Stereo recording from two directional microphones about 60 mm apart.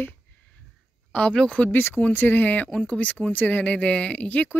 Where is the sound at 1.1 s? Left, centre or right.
Centre.